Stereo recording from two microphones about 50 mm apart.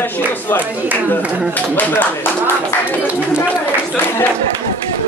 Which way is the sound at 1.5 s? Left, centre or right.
Left.